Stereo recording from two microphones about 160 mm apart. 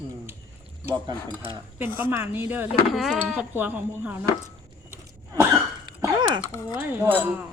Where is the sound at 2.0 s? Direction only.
15° right (ahead or behind).